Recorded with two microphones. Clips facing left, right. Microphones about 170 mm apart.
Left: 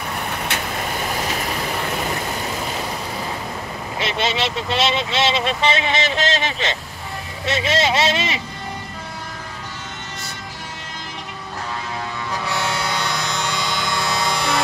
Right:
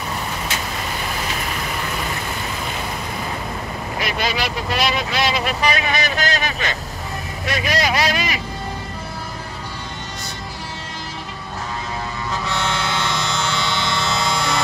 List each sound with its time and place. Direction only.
0.5 s vehicle: 60° left (ahead or behind)
4.0 s speech: 25° left (ahead or behind)
12.6 s a sound: 15° left (ahead or behind)